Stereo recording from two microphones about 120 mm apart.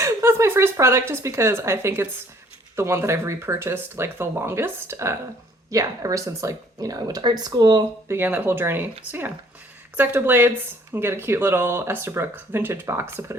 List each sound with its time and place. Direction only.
0.0 s speech: 20° right (ahead or behind)
8.0 s speech: 20° right (ahead or behind)
10.0 s speech: 15° right (ahead or behind)